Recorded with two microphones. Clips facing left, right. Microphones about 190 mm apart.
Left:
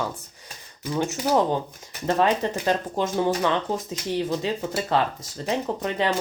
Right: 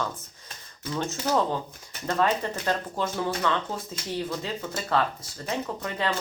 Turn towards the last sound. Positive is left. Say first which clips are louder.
# left 5 dB
turn(degrees=20)  # may be behind; listen again after turning